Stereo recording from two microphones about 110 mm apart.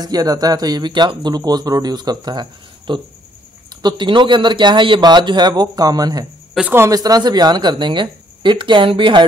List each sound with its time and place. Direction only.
0.0 s speech: 35° right (ahead or behind)
6.6 s speech: 5° right (ahead or behind)
6.9 s speech: 35° right (ahead or behind); by 9.2 s 50° right (ahead or behind)